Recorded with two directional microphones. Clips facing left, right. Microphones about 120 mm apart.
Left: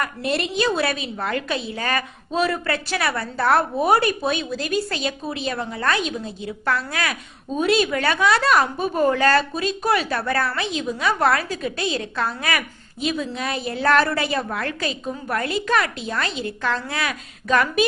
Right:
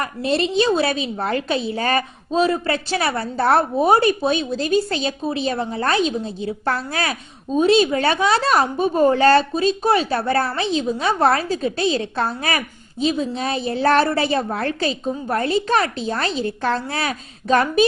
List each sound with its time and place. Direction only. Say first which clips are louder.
0.0 s a woman's voice: right 3 dB; 25° right (ahead or behind)